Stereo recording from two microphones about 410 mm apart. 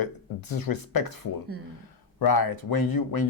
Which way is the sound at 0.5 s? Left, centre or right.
Left.